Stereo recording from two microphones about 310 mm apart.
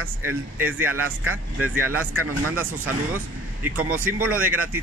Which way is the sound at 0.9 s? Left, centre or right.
Right.